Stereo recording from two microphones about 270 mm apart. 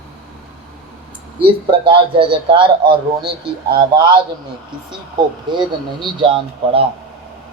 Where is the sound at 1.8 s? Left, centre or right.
Centre.